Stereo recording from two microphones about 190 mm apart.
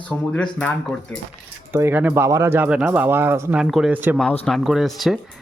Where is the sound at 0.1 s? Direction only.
10° left (ahead or behind).